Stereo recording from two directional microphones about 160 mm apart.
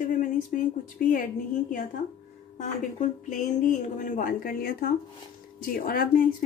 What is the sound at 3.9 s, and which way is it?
A woman's voice, 50° left (ahead or behind).